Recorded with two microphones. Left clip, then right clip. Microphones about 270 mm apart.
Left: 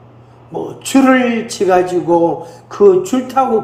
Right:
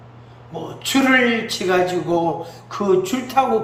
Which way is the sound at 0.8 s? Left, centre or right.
Centre.